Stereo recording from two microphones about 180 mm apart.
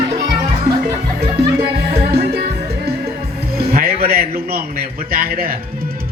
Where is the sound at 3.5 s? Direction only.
60° right (ahead or behind).